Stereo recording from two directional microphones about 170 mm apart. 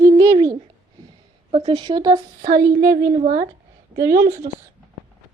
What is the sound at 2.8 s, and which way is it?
A woman's voice, 65° right (ahead or behind).